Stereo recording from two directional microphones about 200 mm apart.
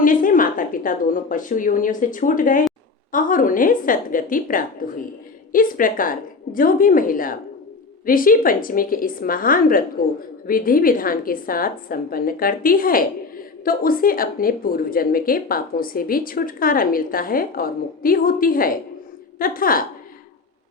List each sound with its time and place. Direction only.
0.0 s a woman's voice: 45° left (ahead or behind)